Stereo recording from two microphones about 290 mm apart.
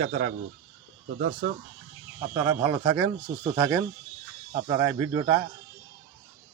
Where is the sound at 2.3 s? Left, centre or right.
Centre.